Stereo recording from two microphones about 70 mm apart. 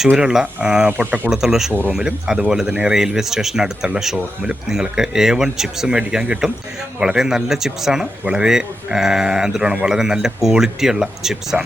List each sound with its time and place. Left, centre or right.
0.2 s speech: centre
0.9 s speech: right
1.3 s speech: centre